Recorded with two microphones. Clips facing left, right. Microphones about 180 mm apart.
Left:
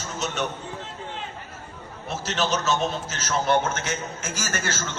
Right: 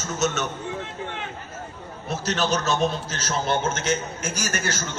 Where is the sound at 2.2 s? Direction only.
40° right (ahead or behind).